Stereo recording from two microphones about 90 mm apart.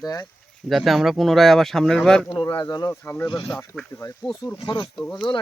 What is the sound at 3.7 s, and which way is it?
Speech, 20° left (ahead or behind).